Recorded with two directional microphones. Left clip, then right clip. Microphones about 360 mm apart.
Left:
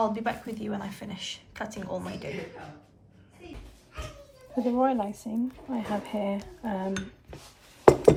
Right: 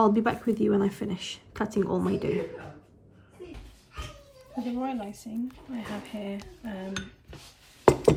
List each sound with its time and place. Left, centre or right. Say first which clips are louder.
0.0 s speech: right 4 dB; centre
4.5 s speech: left 7 dB; centre
7.9 s a sound: left 3 dB; centre